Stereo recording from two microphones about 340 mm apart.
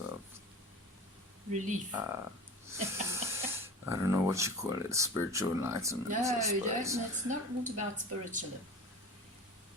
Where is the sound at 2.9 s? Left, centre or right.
Centre.